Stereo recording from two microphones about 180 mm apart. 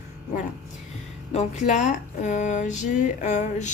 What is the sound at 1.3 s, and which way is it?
A woman's voice, 40° left (ahead or behind).